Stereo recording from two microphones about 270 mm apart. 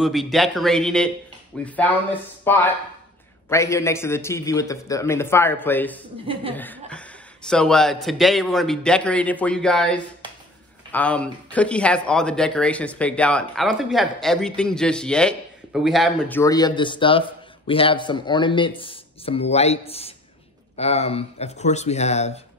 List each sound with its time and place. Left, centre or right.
0.0 s a man's voice: centre; by 22.4 s left